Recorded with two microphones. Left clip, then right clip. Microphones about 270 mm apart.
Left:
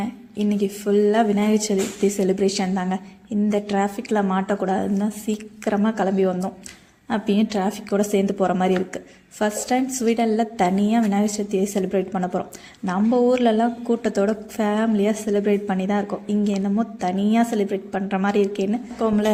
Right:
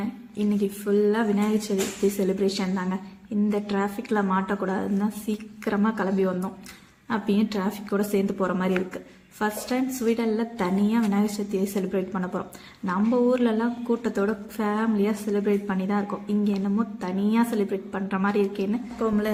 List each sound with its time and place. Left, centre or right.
0.0 s a woman's voice: centre